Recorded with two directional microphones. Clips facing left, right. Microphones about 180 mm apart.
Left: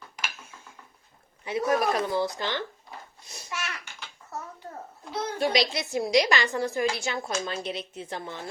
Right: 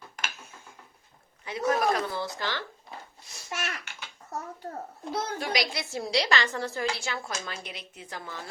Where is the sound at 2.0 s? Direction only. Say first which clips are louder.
Left 5 dB; 20° left (ahead or behind).